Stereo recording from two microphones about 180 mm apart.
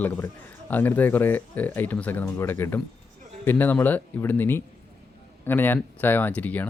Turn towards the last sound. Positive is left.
turn(degrees=10)  # may be behind; listen again after turning